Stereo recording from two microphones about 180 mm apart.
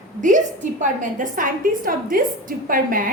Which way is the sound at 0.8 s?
45° right (ahead or behind).